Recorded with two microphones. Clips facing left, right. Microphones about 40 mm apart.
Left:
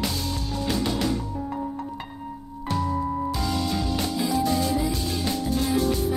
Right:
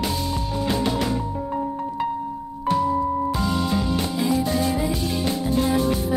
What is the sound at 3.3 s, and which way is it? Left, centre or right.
Music, centre.